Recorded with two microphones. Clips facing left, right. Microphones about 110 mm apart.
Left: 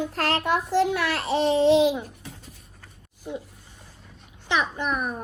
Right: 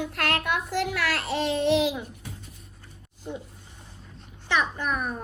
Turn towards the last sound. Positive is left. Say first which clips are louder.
# left 2 dB
turn(degrees=10)  # may be behind; listen again after turning